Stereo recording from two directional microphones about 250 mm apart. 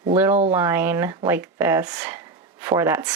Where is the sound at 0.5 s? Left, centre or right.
Centre.